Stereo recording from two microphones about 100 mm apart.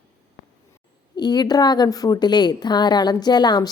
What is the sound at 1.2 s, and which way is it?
A woman's voice, 45° left (ahead or behind).